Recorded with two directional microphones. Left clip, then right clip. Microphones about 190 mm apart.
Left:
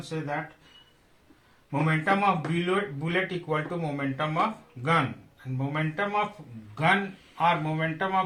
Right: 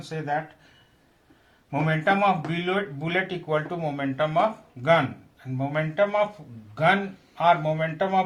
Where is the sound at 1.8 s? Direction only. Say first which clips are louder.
Right 3 dB; 40° right (ahead or behind).